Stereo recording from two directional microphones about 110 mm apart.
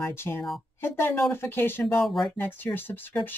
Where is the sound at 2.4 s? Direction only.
20° left (ahead or behind).